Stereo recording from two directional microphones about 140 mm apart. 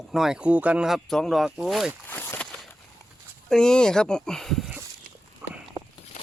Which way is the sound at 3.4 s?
5° left (ahead or behind).